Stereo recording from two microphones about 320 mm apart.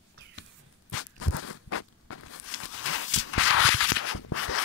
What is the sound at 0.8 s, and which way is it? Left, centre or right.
Walk, left.